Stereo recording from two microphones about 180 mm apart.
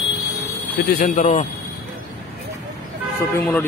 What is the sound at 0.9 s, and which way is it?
Speech, 45° left (ahead or behind).